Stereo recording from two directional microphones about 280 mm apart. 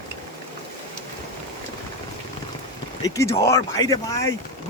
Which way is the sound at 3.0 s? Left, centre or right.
Centre.